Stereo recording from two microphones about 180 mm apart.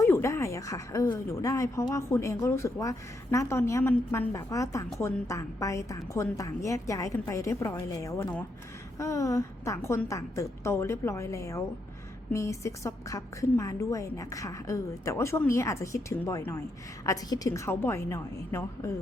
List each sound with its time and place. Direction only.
0.0 s a woman's voice: 15° left (ahead or behind)